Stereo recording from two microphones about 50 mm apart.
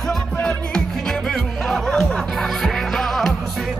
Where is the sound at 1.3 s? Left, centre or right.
Centre.